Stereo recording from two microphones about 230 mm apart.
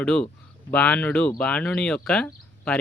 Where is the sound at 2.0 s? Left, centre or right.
Centre.